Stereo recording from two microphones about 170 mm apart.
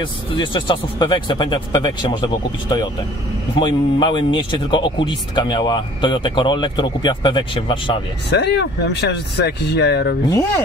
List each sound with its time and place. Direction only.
0.0 s speech: 30° left (ahead or behind)
8.3 s speech: 80° left